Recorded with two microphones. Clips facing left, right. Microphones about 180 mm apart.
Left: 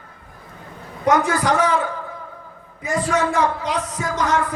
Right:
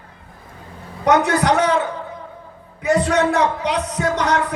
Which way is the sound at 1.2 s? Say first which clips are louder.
Right 2 dB; 65° right (ahead or behind).